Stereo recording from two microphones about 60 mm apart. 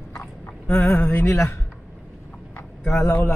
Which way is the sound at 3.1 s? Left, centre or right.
Left.